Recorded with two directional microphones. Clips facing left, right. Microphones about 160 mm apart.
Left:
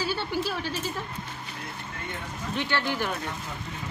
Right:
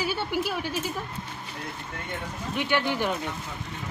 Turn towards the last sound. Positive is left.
turn(degrees=-20)  # may be behind; listen again after turning